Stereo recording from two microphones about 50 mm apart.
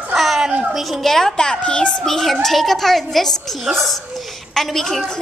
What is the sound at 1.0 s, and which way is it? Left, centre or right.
Speech, centre.